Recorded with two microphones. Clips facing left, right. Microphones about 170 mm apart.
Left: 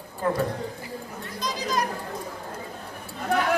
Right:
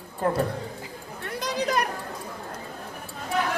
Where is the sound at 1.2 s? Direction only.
65° right (ahead or behind).